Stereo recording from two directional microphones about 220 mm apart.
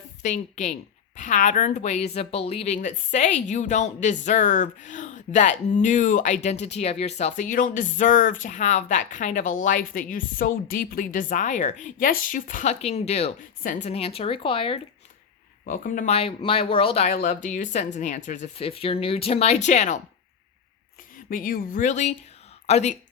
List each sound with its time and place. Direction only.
0.2 s a woman's voice: 35° left (ahead or behind)
15.6 s a woman's voice: 40° left (ahead or behind)
21.2 s a woman's voice: 40° left (ahead or behind)